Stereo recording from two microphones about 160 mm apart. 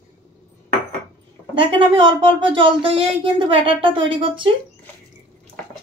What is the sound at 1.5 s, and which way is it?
Speech, 30° right (ahead or behind).